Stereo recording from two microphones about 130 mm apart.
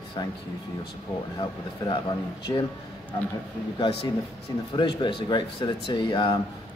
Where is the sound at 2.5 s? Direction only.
30° left (ahead or behind).